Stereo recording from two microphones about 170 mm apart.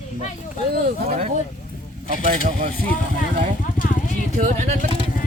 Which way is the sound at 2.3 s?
45° right (ahead or behind).